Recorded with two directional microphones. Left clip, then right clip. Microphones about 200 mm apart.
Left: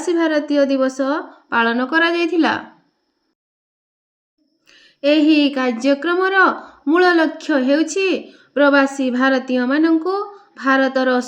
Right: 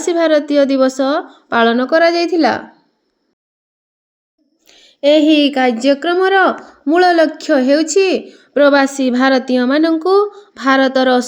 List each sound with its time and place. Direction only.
0.0 s a woman's voice: 35° right (ahead or behind); by 2.6 s 15° right (ahead or behind)
4.6 s speech: 15° right (ahead or behind); by 11.3 s 30° right (ahead or behind)